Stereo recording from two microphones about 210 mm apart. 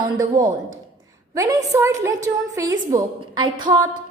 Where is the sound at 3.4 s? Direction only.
20° right (ahead or behind).